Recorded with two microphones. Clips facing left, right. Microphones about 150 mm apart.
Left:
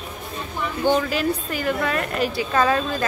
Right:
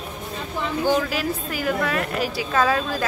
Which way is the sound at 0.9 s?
5° right (ahead or behind).